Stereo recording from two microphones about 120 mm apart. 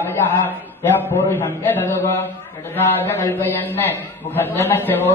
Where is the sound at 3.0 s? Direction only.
20° left (ahead or behind).